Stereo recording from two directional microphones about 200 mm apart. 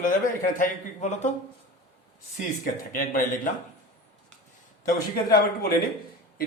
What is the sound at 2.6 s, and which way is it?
Speech, 45° left (ahead or behind).